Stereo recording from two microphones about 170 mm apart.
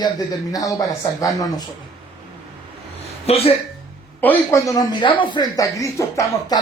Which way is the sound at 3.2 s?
35° left (ahead or behind).